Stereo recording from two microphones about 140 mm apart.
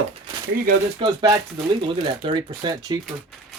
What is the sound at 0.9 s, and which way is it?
Speech, 30° right (ahead or behind).